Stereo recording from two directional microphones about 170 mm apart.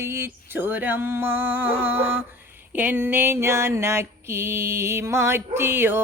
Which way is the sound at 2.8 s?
10° right (ahead or behind).